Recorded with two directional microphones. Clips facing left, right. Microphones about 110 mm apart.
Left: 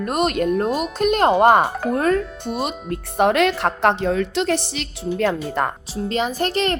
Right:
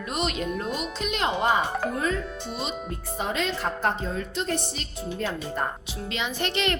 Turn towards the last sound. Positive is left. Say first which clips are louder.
# left 6 dB
turn(degrees=40)  # may be behind; listen again after turning